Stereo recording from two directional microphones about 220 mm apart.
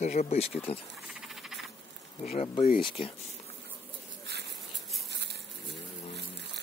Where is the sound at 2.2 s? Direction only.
30° left (ahead or behind).